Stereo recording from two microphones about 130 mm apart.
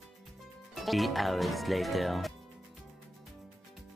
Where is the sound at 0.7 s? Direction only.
Centre (ahead or behind).